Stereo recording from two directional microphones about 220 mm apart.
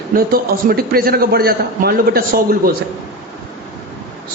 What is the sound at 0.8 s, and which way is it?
A man's voice, 45° right (ahead or behind).